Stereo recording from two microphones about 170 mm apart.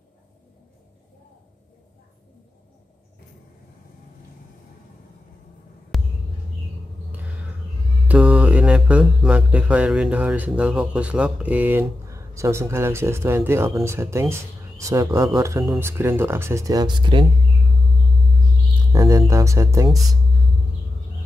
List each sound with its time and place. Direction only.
5.9 s a sound: centre (ahead or behind)
8.1 s mantra: 5° right (ahead or behind)
15.3 s speech: 15° right (ahead or behind)
18.9 s speech: 20° right (ahead or behind)